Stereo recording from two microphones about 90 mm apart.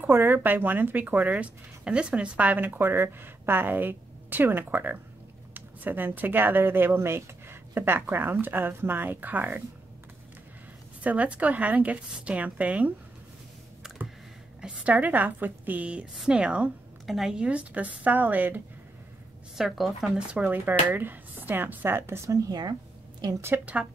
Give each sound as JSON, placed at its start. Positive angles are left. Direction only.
{"t": 0.0, "sound": "speech", "side_deg": -20}
{"t": 11.0, "sound": "a woman's voice", "side_deg": -15}
{"t": 13.8, "sound": "computer keyboard", "side_deg": -5}
{"t": 14.6, "sound": "a woman's voice", "side_deg": -15}
{"t": 19.5, "sound": "speech", "side_deg": 0}
{"t": 23.4, "sound": "a woman's voice", "side_deg": -20}